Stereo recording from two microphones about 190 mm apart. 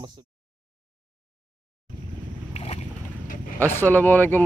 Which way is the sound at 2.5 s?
35° left (ahead or behind).